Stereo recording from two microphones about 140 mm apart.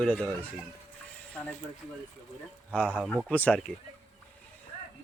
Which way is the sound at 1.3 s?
10° left (ahead or behind).